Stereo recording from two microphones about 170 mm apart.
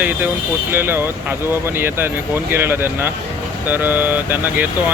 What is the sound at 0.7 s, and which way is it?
Speech, 15° right (ahead or behind).